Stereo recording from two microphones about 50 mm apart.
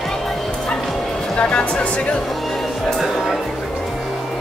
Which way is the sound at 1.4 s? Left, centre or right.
Centre.